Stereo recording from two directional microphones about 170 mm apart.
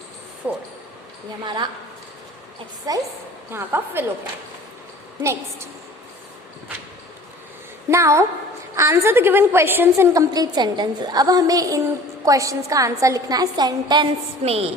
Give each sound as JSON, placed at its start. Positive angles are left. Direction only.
{"t": 0.4, "sound": "a woman's voice", "side_deg": -10}
{"t": 1.5, "sound": "a woman's voice", "side_deg": -25}
{"t": 2.9, "sound": "a woman's voice", "side_deg": -25}
{"t": 3.5, "sound": "a woman's voice", "side_deg": -10}
{"t": 5.2, "sound": "a woman's voice", "side_deg": -15}
{"t": 7.9, "sound": "a woman's voice", "side_deg": -15}
{"t": 14.4, "sound": "speech", "side_deg": -35}